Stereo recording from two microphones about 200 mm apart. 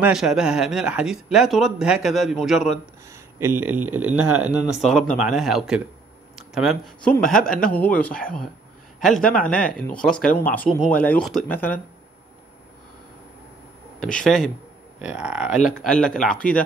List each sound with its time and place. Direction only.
0.0 s speech: centre (ahead or behind)
4.1 s speech: 90° right
4.4 s speech: 5° right (ahead or behind)
13.9 s speech: 5° left (ahead or behind)